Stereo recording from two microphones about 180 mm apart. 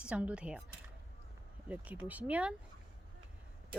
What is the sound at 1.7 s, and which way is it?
Speech, 10° right (ahead or behind).